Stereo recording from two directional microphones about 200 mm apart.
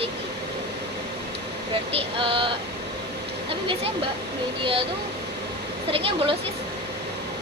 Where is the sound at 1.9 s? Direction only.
25° right (ahead or behind).